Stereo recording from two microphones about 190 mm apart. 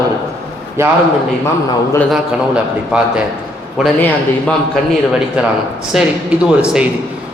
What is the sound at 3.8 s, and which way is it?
Speech, centre (ahead or behind).